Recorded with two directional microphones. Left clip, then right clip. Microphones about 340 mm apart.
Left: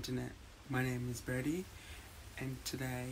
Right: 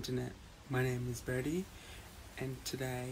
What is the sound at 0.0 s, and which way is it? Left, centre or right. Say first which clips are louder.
Speech: right 2 dB; centre.